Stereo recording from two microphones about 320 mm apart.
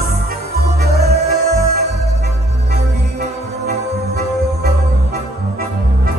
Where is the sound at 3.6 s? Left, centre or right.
Right.